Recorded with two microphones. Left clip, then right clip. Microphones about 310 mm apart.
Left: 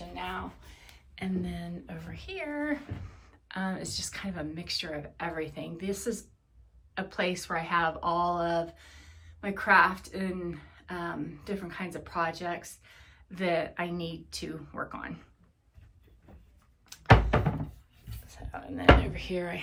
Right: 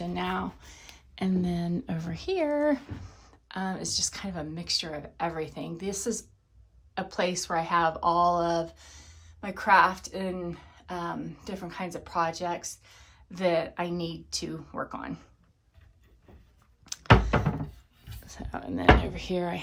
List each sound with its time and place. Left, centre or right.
0.1 s a woman's voice: centre
16.8 s a sound: right
18.3 s speech: right